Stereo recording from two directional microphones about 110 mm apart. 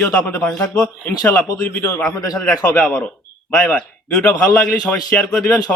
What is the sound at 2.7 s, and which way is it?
Speech, 15° left (ahead or behind).